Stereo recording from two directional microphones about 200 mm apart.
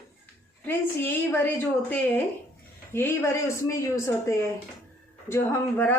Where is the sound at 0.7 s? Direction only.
10° left (ahead or behind).